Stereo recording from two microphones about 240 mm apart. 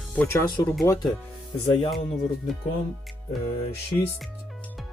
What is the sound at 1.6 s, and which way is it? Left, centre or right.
Speech, left.